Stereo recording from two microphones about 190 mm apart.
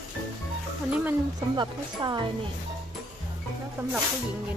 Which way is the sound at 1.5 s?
20° right (ahead or behind).